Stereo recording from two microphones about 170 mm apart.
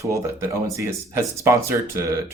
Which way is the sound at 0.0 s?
20° right (ahead or behind).